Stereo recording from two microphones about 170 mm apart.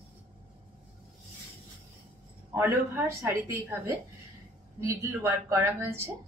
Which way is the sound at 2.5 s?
15° right (ahead or behind).